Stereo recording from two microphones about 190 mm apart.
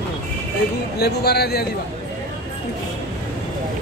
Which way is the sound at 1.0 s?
60° left (ahead or behind).